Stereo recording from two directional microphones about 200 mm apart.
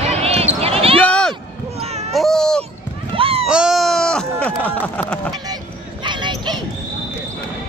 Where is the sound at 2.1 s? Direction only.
Centre (ahead or behind).